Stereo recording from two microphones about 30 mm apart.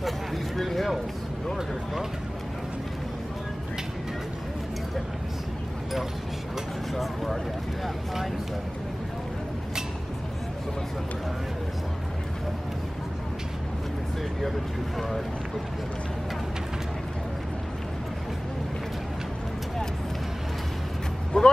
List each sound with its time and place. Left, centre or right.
0.6 s speech: centre
6.9 s speech: centre
15.0 s speech: centre
21.3 s speech: left